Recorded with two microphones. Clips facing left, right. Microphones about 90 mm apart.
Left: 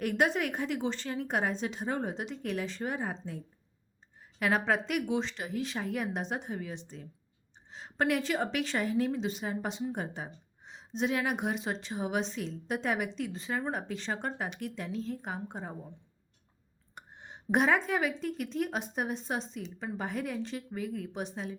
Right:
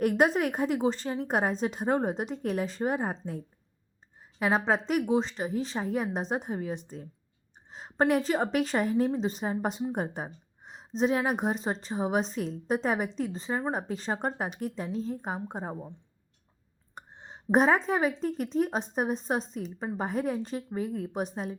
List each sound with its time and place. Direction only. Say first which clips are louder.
0.0 s a woman's voice: right 5 dB; 40° right (ahead or behind)
4.4 s a woman's voice: right 2 dB; 30° right (ahead or behind)
16.9 s a sound: right 2 dB; 35° right (ahead or behind)
18.2 s a woman's voice: right 5 dB; 40° right (ahead or behind)